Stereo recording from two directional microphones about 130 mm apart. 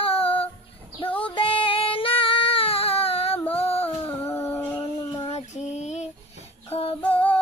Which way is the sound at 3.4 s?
50° left (ahead or behind).